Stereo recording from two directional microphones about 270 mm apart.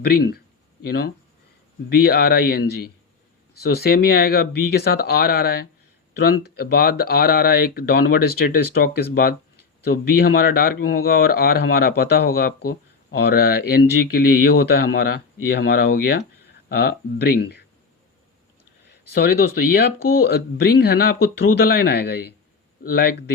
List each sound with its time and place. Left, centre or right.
0.0 s speech: left
19.1 s speech: left